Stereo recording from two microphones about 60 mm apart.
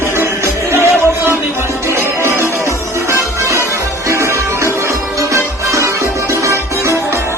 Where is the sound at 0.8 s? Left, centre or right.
Right.